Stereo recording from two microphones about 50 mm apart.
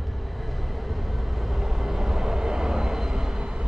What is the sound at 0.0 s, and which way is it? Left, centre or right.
Vehicle, centre.